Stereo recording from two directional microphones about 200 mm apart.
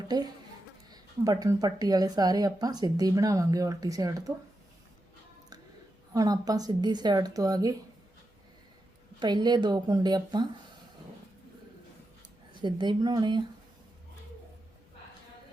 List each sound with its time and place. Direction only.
0.9 s speech: 20° right (ahead or behind)
6.1 s speech: 20° right (ahead or behind)
9.2 s speech: 20° right (ahead or behind)
12.5 s speech: 25° right (ahead or behind)